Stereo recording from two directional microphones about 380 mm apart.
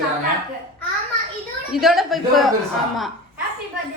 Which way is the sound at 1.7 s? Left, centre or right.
Centre.